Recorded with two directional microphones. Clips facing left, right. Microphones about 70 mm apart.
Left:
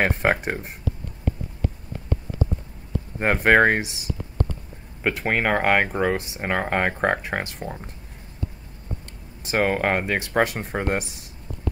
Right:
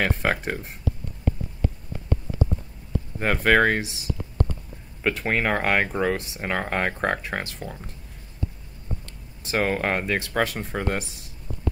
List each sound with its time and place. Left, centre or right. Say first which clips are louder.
0.0 s speech: left 3 dB; left
3.2 s speech: left 2 dB; left
5.0 s speech: left 1 dB; left
9.4 s speech: left 2 dB; centre